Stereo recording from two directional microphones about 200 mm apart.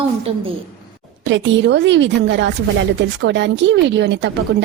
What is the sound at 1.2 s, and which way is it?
A woman's voice, 65° right (ahead or behind).